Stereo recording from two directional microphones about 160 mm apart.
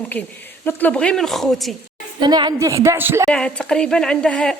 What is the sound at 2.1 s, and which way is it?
A woman's voice, 30° right (ahead or behind).